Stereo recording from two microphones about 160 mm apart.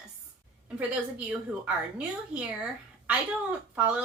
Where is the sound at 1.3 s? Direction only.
5° right (ahead or behind).